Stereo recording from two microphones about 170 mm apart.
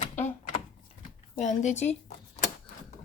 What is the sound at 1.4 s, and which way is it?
Speech, 45° left (ahead or behind).